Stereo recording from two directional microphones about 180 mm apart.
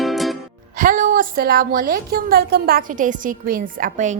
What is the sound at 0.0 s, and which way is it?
Music, centre (ahead or behind).